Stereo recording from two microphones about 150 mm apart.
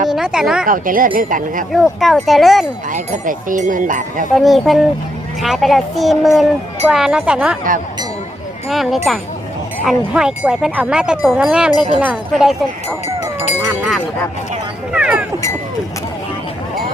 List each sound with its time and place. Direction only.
0.1 s speech: 5° right (ahead or behind)
0.6 s speech: 65° right (ahead or behind)
1.7 s speech: centre (ahead or behind)
2.9 s speech: 60° right (ahead or behind)
4.4 s speech: centre (ahead or behind)
8.7 s speech: centre (ahead or behind)
13.6 s speech: 15° right (ahead or behind)
14.9 s speech: 5° right (ahead or behind)